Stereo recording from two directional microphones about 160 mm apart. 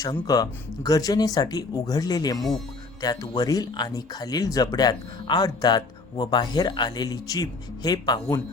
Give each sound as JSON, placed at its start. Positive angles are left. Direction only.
{"t": 0.0, "sound": "speech", "side_deg": 25}
{"t": 2.4, "sound": "speech", "side_deg": 0}
{"t": 3.0, "sound": "speech", "side_deg": 25}